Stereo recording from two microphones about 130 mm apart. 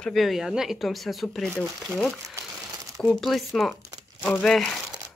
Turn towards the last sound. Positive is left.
turn(degrees=5)  # may be behind; listen again after turning